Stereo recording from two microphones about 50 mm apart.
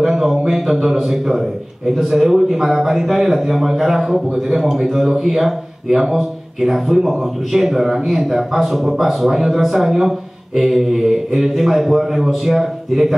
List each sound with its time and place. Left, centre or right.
0.0 s a man's voice: centre